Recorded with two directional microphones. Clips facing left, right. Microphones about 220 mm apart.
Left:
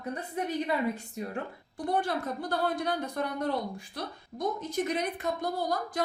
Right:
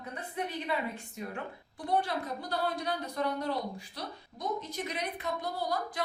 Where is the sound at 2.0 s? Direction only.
50° left (ahead or behind).